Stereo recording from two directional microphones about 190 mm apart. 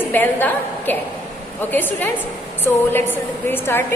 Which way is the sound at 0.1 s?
10° left (ahead or behind).